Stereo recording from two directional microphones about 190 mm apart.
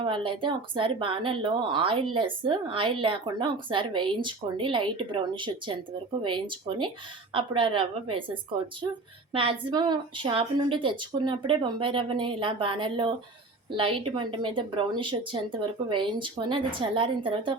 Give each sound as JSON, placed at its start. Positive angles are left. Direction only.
{"t": 0.0, "sound": "speech", "side_deg": -25}